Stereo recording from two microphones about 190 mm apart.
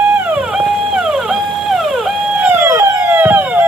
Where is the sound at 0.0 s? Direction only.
5° right (ahead or behind).